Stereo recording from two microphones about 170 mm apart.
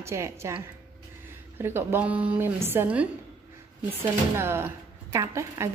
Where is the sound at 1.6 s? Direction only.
15° right (ahead or behind).